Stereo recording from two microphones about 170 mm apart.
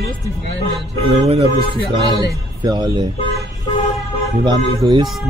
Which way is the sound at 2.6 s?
25° right (ahead or behind).